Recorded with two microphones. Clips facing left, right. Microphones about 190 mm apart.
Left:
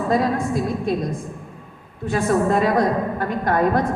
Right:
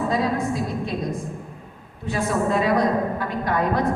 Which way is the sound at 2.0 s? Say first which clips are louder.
Left 4 dB; 50° left (ahead or behind).